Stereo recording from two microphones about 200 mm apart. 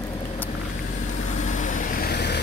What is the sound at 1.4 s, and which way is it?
Vehicle, 40° left (ahead or behind).